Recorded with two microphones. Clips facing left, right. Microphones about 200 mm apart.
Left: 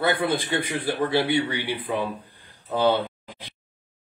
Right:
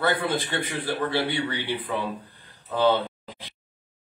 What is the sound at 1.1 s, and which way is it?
Speech, 15° left (ahead or behind).